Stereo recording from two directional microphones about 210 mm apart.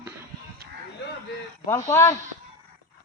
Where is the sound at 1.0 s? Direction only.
55° left (ahead or behind).